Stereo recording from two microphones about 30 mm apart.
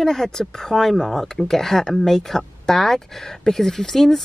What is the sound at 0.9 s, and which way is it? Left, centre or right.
Speech, centre.